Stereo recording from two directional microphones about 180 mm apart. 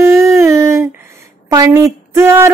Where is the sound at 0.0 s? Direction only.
15° right (ahead or behind).